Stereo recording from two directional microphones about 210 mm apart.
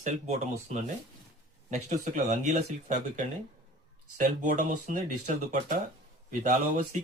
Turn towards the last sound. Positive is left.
turn(degrees=-35)  # may be behind; listen again after turning